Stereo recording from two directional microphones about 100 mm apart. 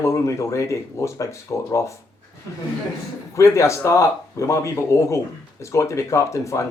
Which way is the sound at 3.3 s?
30° left (ahead or behind).